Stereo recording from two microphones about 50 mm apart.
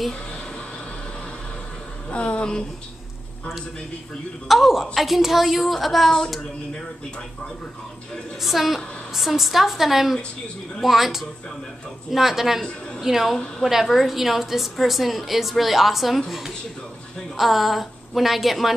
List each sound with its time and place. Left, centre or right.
2.0 s speech: left
4.5 s a woman's voice: centre
8.4 s a woman's voice: centre